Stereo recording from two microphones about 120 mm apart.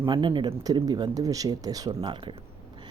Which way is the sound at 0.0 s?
40° right (ahead or behind).